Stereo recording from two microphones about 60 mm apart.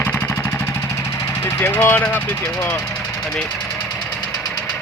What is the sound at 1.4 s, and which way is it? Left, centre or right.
Speech, left.